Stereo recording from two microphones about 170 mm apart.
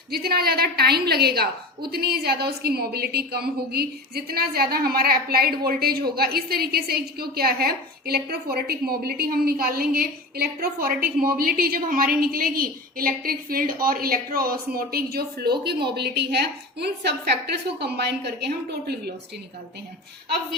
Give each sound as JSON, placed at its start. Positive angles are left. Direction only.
{"t": 0.1, "sound": "a woman's voice", "side_deg": -65}